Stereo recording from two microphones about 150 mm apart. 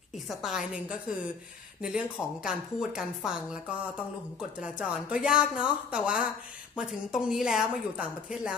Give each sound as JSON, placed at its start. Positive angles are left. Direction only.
{"t": 0.3, "sound": "speech", "side_deg": -5}
{"t": 4.4, "sound": "speech", "side_deg": -5}